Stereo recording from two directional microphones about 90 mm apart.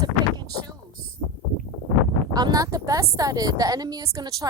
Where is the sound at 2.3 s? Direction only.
45° right (ahead or behind).